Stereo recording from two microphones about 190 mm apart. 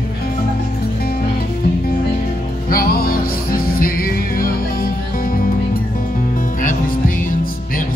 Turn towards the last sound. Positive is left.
turn(degrees=45)  # may be behind; listen again after turning